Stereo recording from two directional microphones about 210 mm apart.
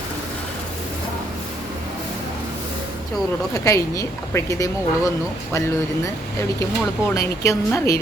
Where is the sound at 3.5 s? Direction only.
15° left (ahead or behind).